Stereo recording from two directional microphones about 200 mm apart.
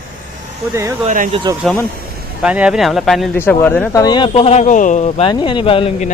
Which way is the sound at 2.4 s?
5° right (ahead or behind).